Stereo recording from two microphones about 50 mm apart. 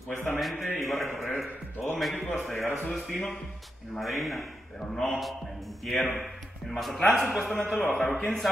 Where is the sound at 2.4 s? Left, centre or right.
Centre.